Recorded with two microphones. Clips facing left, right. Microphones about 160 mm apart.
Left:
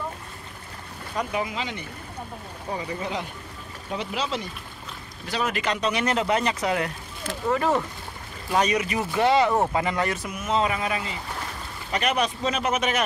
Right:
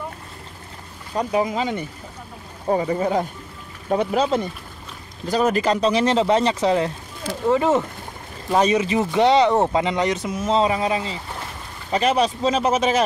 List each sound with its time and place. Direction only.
1.1 s speech: 35° right (ahead or behind)